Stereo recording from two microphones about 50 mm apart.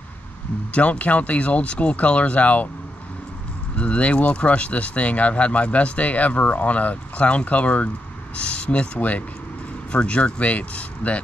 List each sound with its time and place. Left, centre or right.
0.7 s speech: left
3.7 s speech: left